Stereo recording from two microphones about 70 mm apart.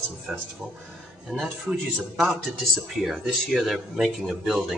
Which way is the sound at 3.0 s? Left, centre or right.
Centre.